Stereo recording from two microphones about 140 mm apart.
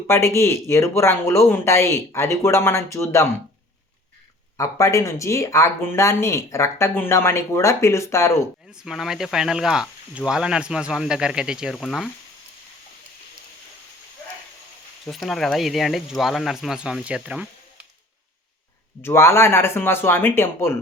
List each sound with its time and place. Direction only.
0.1 s speech: 20° left (ahead or behind)
4.5 s speech: 20° left (ahead or behind)
8.7 s speech: 5° right (ahead or behind)
15.0 s speech: centre (ahead or behind)
19.0 s speech: 20° left (ahead or behind)